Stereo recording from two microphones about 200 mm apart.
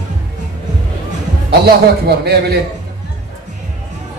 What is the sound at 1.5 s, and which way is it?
A woman's voice, 50° right (ahead or behind).